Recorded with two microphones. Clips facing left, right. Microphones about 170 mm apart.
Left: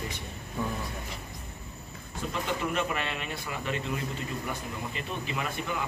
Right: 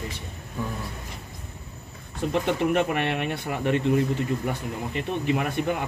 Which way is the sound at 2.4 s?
60° right (ahead or behind).